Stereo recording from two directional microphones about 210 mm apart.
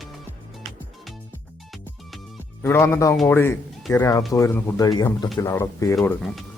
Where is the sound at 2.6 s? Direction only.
10° left (ahead or behind).